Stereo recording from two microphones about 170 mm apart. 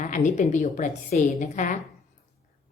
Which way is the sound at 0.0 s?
45° left (ahead or behind).